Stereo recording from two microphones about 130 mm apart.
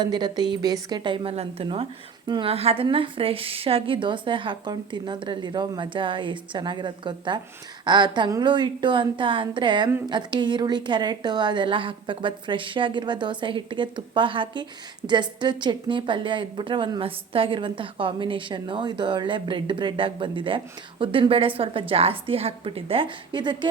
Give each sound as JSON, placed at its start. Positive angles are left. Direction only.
{"t": 0.0, "sound": "a woman's voice", "side_deg": -35}
{"t": 2.5, "sound": "a woman's voice", "side_deg": -50}